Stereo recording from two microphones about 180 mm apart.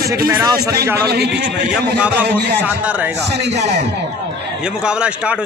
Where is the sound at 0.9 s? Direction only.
65° right (ahead or behind).